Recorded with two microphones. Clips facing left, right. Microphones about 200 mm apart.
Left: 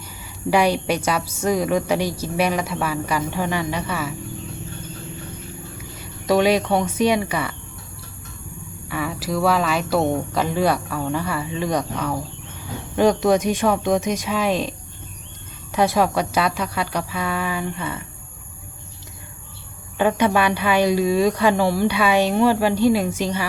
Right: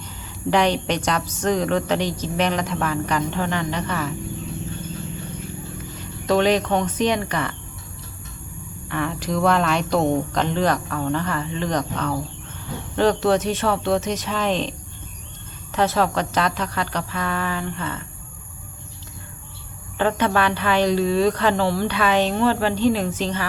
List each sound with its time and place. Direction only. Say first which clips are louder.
0.5 s a woman's voice: left 1 dB; 10° left (ahead or behind)
6.0 s speech: left 1 dB; 10° left (ahead or behind)
8.9 s a woman's voice: even; 5° left (ahead or behind)
20.0 s a woman's voice: left 2 dB; 10° left (ahead or behind)